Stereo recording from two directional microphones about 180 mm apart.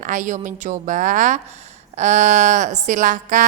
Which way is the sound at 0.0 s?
45° right (ahead or behind).